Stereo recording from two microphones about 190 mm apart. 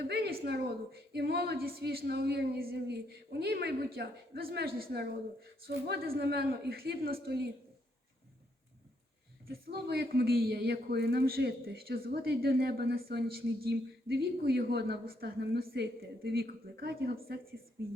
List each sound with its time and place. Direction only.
0.0 s a man's voice: 60° right (ahead or behind)
9.5 s a man's voice: 55° right (ahead or behind)